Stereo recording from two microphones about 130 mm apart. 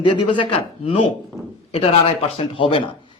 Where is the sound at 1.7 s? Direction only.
45° left (ahead or behind).